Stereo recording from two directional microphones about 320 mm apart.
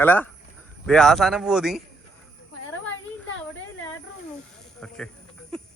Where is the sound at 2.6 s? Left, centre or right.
Left.